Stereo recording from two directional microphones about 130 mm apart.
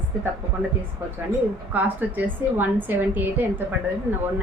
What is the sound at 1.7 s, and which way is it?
A woman's voice, 15° right (ahead or behind).